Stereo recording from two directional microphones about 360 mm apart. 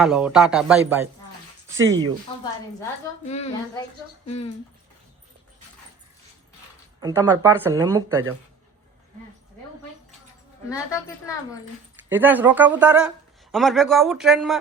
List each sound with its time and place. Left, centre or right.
0.0 s speech: centre
3.2 s a woman's voice: centre
7.0 s speech: centre
12.0 s speech: centre